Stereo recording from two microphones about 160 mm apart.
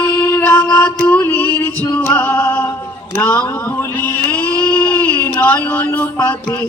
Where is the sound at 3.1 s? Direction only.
10° left (ahead or behind).